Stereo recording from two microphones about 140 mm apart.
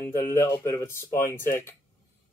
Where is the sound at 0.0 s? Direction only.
20° left (ahead or behind).